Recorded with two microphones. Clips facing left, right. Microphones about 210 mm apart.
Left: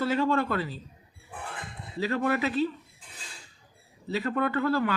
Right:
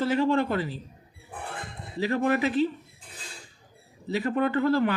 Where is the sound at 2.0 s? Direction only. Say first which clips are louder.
Right 2 dB; 20° right (ahead or behind).